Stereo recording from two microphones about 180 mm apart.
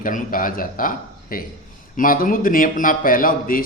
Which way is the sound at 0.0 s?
50° left (ahead or behind).